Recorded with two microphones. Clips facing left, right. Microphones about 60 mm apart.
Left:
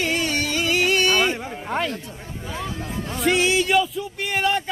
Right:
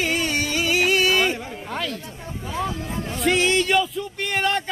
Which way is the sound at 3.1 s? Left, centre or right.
Centre.